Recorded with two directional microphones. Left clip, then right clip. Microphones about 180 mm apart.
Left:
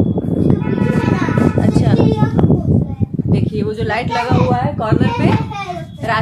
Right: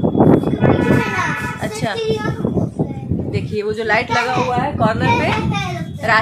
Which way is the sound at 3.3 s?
25° right (ahead or behind).